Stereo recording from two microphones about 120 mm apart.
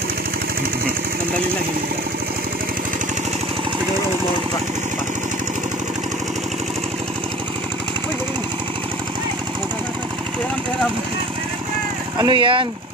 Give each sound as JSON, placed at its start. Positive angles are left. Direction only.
{"t": 12.2, "sound": "speech", "side_deg": -40}